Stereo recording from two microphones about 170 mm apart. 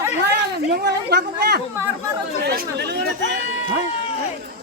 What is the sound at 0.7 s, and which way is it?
Speech, 70° right (ahead or behind).